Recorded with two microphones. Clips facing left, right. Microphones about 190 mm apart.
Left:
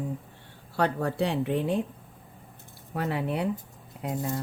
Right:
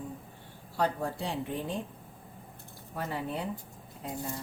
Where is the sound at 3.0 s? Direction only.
70° left (ahead or behind).